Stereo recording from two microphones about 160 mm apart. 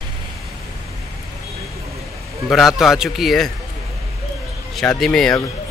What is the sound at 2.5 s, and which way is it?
Speech, centre (ahead or behind).